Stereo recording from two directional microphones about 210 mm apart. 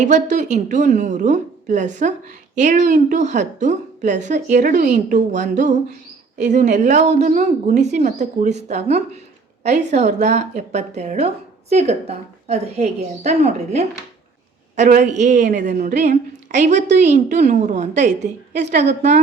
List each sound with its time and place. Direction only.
0.0 s a woman's voice: 35° right (ahead or behind)
18.5 s a woman's voice: 55° right (ahead or behind)
18.8 s a woman's voice: 35° right (ahead or behind)